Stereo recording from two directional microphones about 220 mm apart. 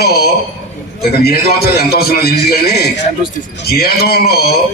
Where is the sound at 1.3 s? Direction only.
45° left (ahead or behind).